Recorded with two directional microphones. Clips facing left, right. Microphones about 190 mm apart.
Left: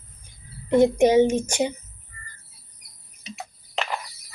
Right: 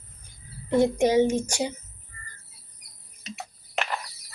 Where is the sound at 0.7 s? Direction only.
20° left (ahead or behind).